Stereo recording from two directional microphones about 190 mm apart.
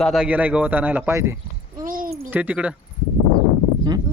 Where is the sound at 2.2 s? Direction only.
10° right (ahead or behind).